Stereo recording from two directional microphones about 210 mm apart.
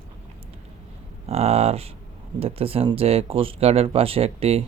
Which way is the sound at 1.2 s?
30° right (ahead or behind).